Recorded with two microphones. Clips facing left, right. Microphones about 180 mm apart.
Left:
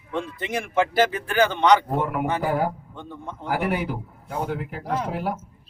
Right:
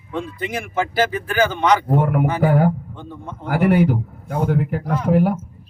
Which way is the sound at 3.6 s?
50° right (ahead or behind).